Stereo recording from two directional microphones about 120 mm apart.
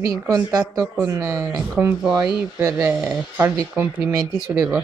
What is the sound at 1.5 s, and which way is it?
Speech, 10° right (ahead or behind).